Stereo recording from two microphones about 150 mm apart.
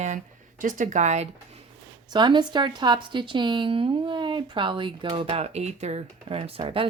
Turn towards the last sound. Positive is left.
turn(degrees=-40)  # may be behind; listen again after turning